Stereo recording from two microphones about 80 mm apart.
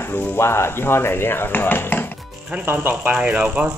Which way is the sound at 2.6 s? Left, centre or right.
Right.